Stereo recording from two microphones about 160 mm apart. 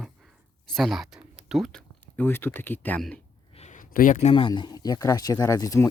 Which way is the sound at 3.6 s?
50° left (ahead or behind).